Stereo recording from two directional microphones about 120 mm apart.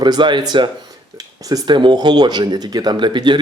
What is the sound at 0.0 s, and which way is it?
Speech, 40° right (ahead or behind).